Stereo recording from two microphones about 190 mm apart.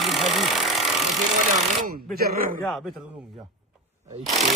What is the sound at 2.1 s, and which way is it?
Speech, 50° right (ahead or behind).